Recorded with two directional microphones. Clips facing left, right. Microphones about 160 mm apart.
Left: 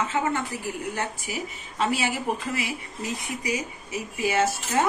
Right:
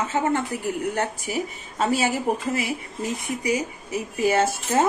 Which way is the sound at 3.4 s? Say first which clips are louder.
Right 5 dB; 40° right (ahead or behind).